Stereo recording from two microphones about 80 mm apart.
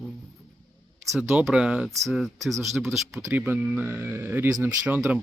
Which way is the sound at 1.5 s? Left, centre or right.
Centre.